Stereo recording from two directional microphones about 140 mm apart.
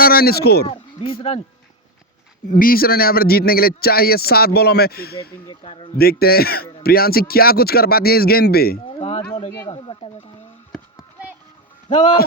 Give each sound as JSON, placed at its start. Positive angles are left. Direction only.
{"t": 0.0, "sound": "a man's voice", "side_deg": 90}
{"t": 1.3, "sound": "speech", "side_deg": 50}
{"t": 2.5, "sound": "a man's voice", "side_deg": 85}
{"t": 5.6, "sound": "speech", "side_deg": 40}
{"t": 6.0, "sound": "a man's voice", "side_deg": 90}
{"t": 8.9, "sound": "a sound", "side_deg": 40}
{"t": 9.4, "sound": "speech", "side_deg": 40}
{"t": 11.9, "sound": "speech", "side_deg": 35}